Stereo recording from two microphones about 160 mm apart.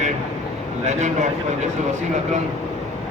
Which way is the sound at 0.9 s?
45° right (ahead or behind).